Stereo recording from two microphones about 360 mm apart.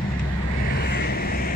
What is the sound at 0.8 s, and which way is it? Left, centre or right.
Vehicle, left.